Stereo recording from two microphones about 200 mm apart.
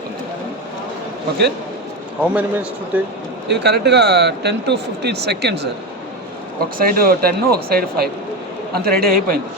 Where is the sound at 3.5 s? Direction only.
55° right (ahead or behind).